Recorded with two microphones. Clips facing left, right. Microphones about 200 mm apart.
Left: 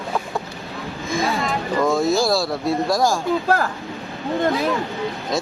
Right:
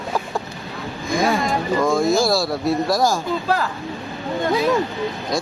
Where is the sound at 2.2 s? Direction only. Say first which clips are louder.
Right 1 dB; centre (ahead or behind).